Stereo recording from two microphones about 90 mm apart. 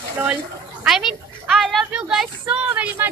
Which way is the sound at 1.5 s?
Centre (ahead or behind).